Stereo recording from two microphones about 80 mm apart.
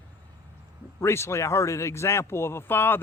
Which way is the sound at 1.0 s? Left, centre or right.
Left.